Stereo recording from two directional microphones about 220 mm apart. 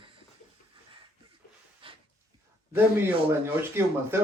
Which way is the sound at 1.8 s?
25° right (ahead or behind).